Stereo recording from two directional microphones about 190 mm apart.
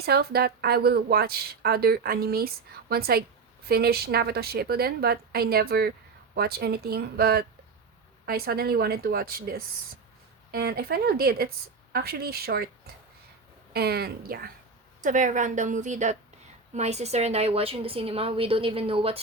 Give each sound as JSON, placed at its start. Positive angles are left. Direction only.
{"t": 0.0, "sound": "a woman's voice", "side_deg": -55}
{"t": 13.7, "sound": "a woman's voice", "side_deg": -55}
{"t": 15.0, "sound": "a woman's voice", "side_deg": -40}